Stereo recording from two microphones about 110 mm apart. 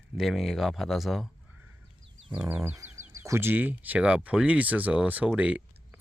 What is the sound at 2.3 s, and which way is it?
Speech, 15° right (ahead or behind).